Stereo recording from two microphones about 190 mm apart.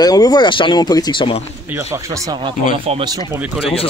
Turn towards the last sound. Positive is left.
turn(degrees=30)  # may be behind; listen again after turning